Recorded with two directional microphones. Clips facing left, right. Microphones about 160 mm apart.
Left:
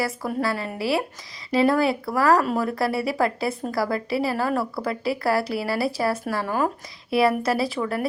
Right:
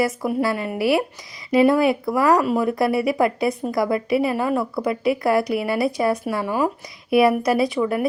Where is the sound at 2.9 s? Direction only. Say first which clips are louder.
Right 5 dB; 30° left (ahead or behind).